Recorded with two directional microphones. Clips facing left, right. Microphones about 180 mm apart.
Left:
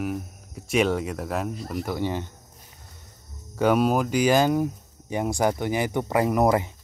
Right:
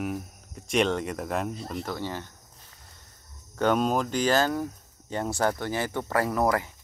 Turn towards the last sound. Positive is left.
turn(degrees=20)  # may be behind; listen again after turning